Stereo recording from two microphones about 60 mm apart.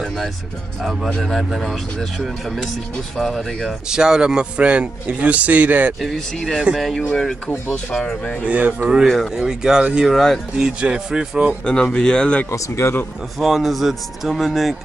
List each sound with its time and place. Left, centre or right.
1.2 s speech: centre
3.9 s a man's voice: centre; by 5.9 s right
5.9 s speech: centre
8.0 s speech: left
8.5 s a man's voice: right
8.8 s speech: centre
10.0 s speech: centre
10.6 s speech: centre
11.6 s speech: centre
12.4 s speech: left
13.4 s speech: centre